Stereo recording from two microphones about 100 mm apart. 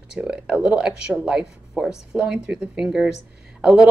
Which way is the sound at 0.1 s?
10° right (ahead or behind).